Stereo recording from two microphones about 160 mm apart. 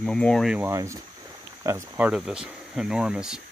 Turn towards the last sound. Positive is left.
turn(degrees=-5)  # may be behind; listen again after turning